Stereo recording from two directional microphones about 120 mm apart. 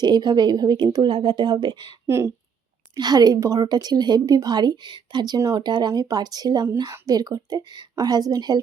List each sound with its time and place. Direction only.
0.0 s a woman's voice: 35° right (ahead or behind)
2.0 s speech: 25° right (ahead or behind)
2.9 s a woman's voice: 35° right (ahead or behind)